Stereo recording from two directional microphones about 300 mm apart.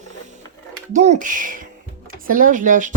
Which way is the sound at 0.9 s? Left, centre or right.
Right.